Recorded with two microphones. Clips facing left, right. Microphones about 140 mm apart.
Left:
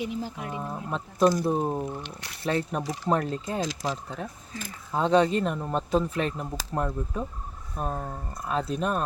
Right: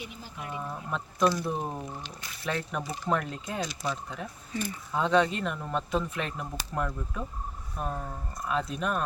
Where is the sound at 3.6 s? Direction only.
90° left.